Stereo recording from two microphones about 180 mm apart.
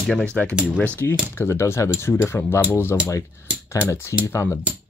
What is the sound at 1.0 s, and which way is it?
Speech, 15° left (ahead or behind).